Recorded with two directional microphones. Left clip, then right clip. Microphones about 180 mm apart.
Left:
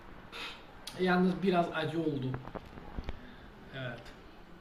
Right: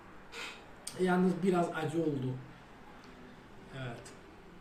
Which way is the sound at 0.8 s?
20° right (ahead or behind).